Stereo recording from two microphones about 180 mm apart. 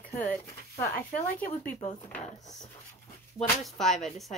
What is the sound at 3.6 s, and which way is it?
Speech, centre (ahead or behind).